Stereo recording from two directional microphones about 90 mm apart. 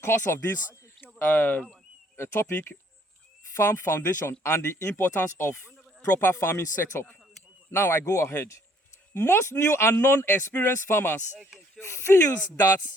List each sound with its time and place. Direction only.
0.0 s speech: 30° left (ahead or behind)